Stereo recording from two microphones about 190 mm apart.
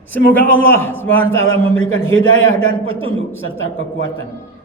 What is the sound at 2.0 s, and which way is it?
Speech, 90° left.